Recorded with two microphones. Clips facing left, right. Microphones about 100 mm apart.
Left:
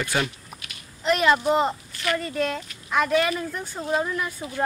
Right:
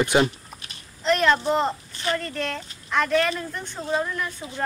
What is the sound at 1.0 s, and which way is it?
Speech, 5° left (ahead or behind).